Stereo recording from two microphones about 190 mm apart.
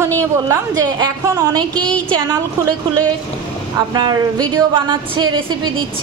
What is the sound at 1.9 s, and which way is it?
Speech, 5° left (ahead or behind).